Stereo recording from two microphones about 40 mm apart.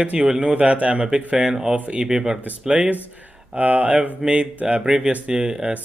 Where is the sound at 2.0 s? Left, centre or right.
Centre.